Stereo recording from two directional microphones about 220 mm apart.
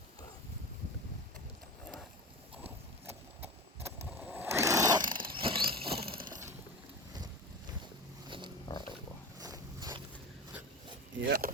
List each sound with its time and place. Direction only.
3.1 s vehicle: 10° right (ahead or behind)
8.6 s pig: 20° left (ahead or behind)
9.4 s a sound: 15° right (ahead or behind)
11.2 s speech: 45° right (ahead or behind)